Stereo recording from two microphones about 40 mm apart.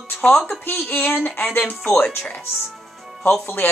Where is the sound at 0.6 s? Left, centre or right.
Left.